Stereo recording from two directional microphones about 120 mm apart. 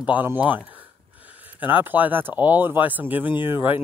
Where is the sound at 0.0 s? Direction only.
15° right (ahead or behind).